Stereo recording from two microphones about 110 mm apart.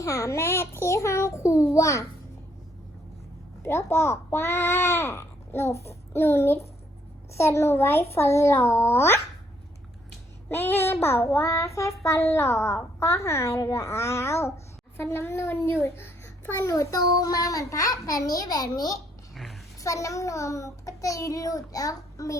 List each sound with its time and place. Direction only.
0.0 s child singing: 30° left (ahead or behind)
3.6 s a child's voice: 25° left (ahead or behind)
5.7 s child singing: 25° left (ahead or behind)
10.5 s child singing: 20° left (ahead or behind)
14.9 s a child's voice: 20° left (ahead or behind)
19.3 s a sound: centre (ahead or behind)
19.8 s child singing: 30° left (ahead or behind)